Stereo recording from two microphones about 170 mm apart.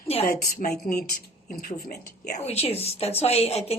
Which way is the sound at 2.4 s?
40° left (ahead or behind).